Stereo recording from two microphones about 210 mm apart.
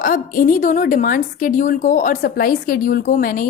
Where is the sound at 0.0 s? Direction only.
40° left (ahead or behind).